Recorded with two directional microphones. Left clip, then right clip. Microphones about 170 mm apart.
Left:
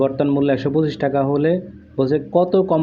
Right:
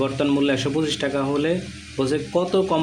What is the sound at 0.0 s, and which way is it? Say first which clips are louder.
A man's voice: left 3 dB; 15° left (ahead or behind).